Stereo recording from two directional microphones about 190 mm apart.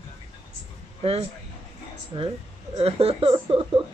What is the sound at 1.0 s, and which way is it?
Speech, 30° right (ahead or behind).